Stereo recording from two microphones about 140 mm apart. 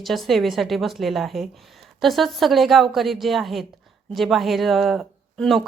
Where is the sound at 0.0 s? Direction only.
Centre (ahead or behind).